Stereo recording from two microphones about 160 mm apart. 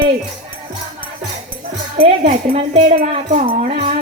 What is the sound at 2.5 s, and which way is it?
Speech, 50° right (ahead or behind).